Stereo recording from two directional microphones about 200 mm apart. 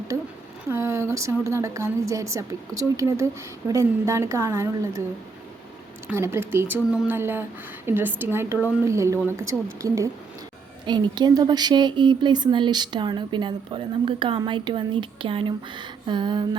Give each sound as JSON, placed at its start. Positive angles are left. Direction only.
{"t": 0.1, "sound": "a sound", "side_deg": -15}
{"t": 0.7, "sound": "a woman's voice", "side_deg": -15}
{"t": 6.1, "sound": "a woman's voice", "side_deg": -10}